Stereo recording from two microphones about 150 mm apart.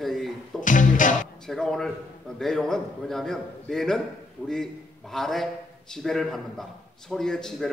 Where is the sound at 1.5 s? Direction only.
5° left (ahead or behind).